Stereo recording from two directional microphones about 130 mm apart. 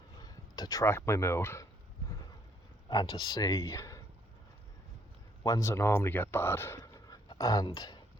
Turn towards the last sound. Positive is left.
turn(degrees=30)  # may be behind; listen again after turning